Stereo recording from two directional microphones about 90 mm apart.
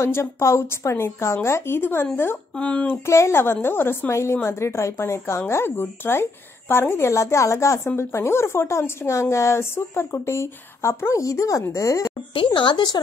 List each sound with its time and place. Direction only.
0.0 s a woman's voice: 30° left (ahead or behind)
2.5 s speech: 15° left (ahead or behind)
3.1 s a woman's voice: 30° left (ahead or behind)
12.4 s speech: 60° left (ahead or behind)